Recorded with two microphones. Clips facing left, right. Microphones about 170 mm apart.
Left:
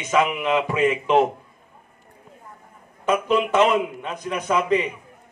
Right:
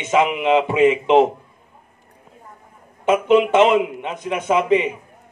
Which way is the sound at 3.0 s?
20° right (ahead or behind).